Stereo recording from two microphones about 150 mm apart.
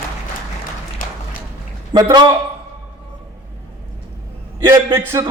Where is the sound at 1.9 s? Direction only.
25° right (ahead or behind).